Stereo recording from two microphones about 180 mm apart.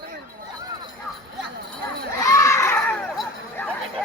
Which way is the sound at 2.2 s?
15° left (ahead or behind).